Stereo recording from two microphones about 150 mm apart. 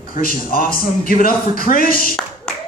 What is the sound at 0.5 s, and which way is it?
A man's voice, 75° left (ahead or behind).